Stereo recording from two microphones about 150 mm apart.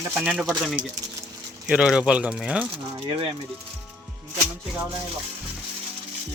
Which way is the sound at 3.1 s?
40° right (ahead or behind).